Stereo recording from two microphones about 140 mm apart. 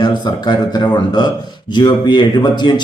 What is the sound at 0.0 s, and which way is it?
Speech, 30° left (ahead or behind).